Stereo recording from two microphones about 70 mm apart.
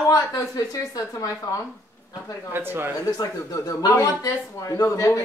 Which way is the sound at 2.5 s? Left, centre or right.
Right.